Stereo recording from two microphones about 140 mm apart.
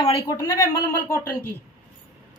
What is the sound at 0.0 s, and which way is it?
A woman's voice, 25° left (ahead or behind).